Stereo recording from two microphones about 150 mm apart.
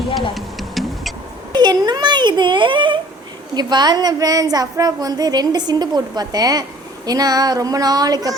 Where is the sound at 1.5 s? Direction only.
30° right (ahead or behind).